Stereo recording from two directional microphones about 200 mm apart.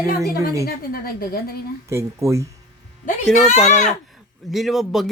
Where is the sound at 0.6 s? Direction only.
45° left (ahead or behind).